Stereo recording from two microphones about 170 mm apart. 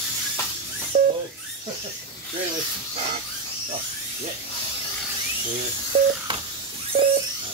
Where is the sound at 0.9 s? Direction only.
55° right (ahead or behind).